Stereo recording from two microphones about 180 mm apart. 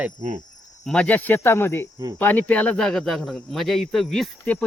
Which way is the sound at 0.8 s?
5° left (ahead or behind).